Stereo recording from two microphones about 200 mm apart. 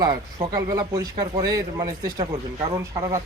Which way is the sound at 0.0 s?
20° right (ahead or behind).